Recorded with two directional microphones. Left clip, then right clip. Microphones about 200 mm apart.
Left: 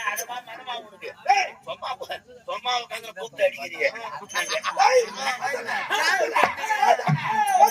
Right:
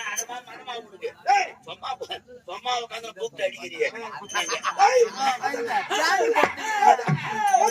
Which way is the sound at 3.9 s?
20° right (ahead or behind).